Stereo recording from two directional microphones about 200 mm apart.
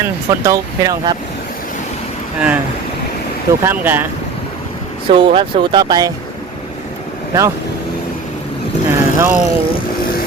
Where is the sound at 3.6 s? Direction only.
10° right (ahead or behind).